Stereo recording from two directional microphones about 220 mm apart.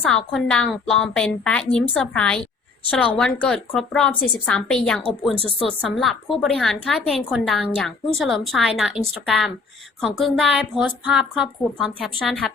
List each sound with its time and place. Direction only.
0.1 s a woman's voice: 5° left (ahead or behind)